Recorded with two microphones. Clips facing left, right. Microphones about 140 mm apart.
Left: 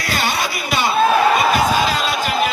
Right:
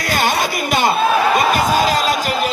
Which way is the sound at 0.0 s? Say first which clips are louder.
Right 3 dB; 45° right (ahead or behind).